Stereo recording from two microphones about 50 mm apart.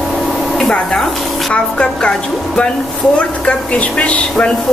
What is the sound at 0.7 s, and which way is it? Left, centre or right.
Speech, centre.